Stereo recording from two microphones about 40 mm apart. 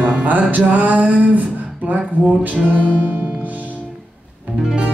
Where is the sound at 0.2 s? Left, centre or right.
Right.